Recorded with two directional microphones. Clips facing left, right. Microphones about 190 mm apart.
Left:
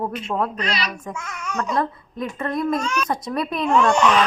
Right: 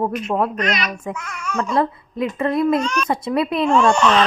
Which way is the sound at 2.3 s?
5° right (ahead or behind).